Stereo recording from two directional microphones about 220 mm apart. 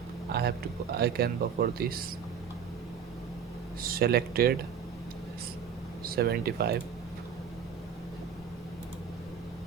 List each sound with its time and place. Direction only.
0.3 s a sound: 45° right (ahead or behind)
0.9 s speech: 45° right (ahead or behind)
3.8 s speech: 45° right (ahead or behind)
6.1 s speech: 45° right (ahead or behind)